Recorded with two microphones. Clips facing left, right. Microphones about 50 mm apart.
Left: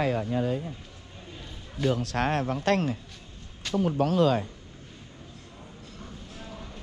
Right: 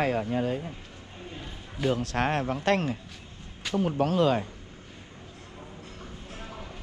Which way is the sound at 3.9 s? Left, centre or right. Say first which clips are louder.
Left 1 dB; right.